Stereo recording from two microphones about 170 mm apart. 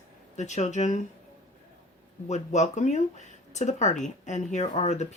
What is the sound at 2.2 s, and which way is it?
Speech, 45° left (ahead or behind).